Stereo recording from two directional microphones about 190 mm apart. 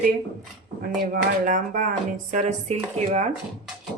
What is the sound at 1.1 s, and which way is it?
Speech, 45° right (ahead or behind).